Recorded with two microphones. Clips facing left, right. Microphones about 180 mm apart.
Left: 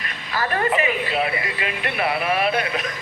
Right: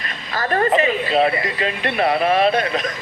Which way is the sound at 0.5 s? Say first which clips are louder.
Right 5 dB; 40° right (ahead or behind).